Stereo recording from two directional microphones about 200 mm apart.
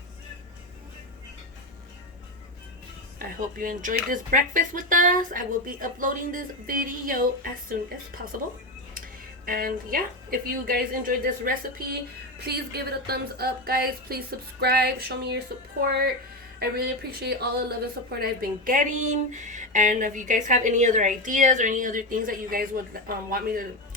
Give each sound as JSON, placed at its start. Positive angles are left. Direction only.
{"t": 3.2, "sound": "speech", "side_deg": -45}
{"t": 9.5, "sound": "speech", "side_deg": -45}